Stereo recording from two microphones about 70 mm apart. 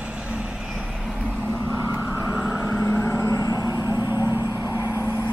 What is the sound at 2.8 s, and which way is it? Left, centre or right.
Vehicle, left.